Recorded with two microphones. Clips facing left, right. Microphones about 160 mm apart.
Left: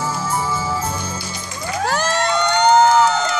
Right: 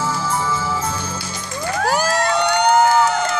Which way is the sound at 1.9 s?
10° right (ahead or behind).